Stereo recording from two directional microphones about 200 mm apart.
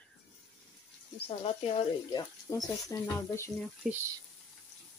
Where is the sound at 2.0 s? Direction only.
20° left (ahead or behind).